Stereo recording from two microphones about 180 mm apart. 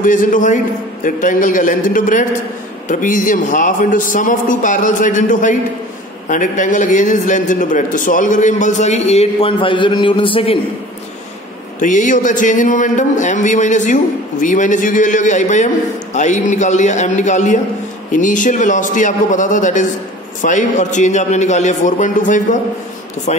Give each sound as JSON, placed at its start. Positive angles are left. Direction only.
{"t": 0.0, "sound": "speech", "side_deg": 45}
{"t": 11.8, "sound": "a man's voice", "side_deg": 45}